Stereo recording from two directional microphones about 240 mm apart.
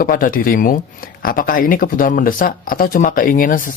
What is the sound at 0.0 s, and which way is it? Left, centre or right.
Speech, left.